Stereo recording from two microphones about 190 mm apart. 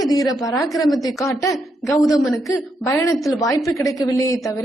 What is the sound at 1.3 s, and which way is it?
Speech, 15° left (ahead or behind).